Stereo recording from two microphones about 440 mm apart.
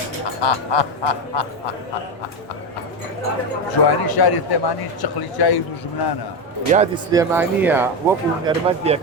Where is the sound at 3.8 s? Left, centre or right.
Left.